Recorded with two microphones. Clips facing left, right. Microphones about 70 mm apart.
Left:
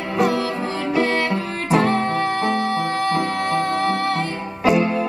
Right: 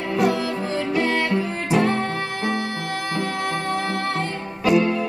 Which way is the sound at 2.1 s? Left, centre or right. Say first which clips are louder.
Left 5 dB; centre.